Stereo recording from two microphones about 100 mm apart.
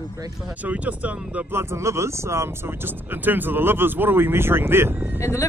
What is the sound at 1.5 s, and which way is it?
Speech, 25° right (ahead or behind).